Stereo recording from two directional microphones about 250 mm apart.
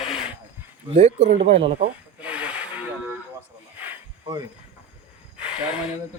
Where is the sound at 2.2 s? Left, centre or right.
Centre.